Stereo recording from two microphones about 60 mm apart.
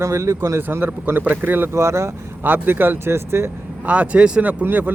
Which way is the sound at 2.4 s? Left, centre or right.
Right.